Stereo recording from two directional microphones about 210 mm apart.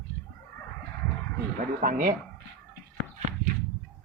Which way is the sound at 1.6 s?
40° right (ahead or behind).